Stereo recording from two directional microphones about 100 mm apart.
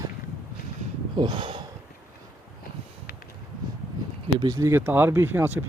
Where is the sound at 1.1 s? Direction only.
50° right (ahead or behind).